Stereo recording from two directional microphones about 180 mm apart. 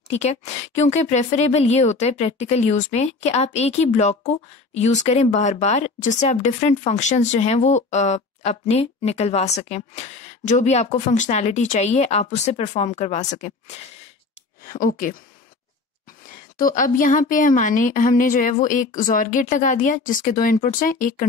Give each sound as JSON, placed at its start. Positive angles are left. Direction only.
{"t": 0.1, "sound": "speech", "side_deg": 40}
{"t": 16.5, "sound": "a woman's voice", "side_deg": 50}